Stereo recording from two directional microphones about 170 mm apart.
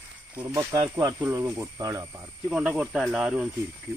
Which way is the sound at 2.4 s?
5° right (ahead or behind).